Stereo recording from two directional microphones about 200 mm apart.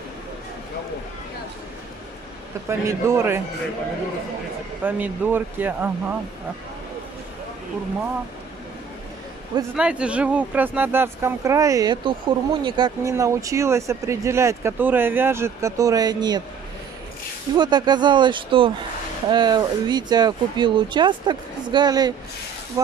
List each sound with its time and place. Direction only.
2.9 s speech: 15° right (ahead or behind)
4.8 s speech: 10° right (ahead or behind)
9.8 s speech: 5° right (ahead or behind); by 16.4 s 20° right (ahead or behind)
17.6 s speech: 20° right (ahead or behind)